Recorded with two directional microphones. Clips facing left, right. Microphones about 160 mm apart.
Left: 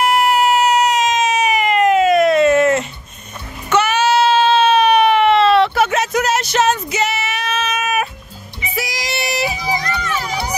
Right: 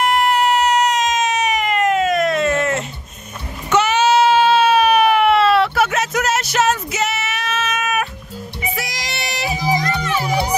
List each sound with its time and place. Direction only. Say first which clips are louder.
0.0 s baby cry: left 2 dB; 5° left (ahead or behind)
3.7 s baby cry: even; 20° right (ahead or behind); by 8.1 s centre (ahead or behind)
8.7 s music: left 4 dB; 5° left (ahead or behind)
9.5 s music: right 2 dB; 45° right (ahead or behind)